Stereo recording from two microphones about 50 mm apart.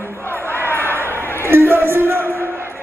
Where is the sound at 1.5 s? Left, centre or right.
Right.